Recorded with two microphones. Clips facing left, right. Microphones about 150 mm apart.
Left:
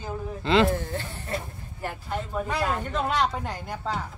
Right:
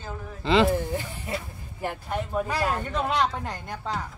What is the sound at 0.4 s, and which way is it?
Speech, centre (ahead or behind).